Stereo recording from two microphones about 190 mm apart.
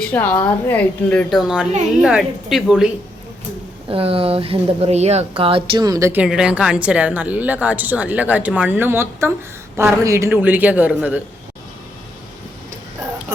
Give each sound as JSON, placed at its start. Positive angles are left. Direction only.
{"t": 0.0, "sound": "a woman's voice", "side_deg": 10}
{"t": 3.8, "sound": "speech", "side_deg": -30}